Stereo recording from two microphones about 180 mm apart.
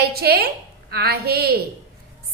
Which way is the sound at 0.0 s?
65° right (ahead or behind).